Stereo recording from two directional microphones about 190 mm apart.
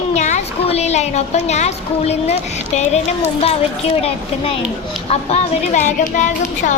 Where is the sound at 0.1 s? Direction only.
35° left (ahead or behind).